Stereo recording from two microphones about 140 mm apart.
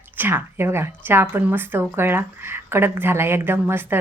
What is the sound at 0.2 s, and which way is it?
Speech, 15° right (ahead or behind).